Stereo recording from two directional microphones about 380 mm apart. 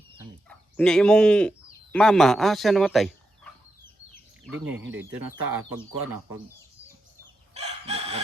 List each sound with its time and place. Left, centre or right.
0.4 s speech: centre
5.5 s speech: right
7.5 s chicken: centre